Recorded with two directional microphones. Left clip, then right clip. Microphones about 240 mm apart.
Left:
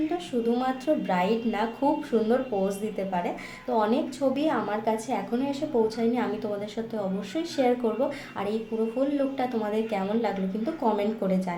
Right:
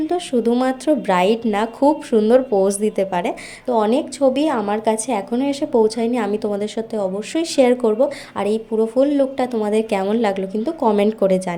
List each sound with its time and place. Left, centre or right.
0.1 s a woman's voice: right